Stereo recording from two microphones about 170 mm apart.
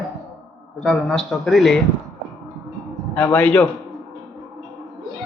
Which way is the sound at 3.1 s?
5° left (ahead or behind).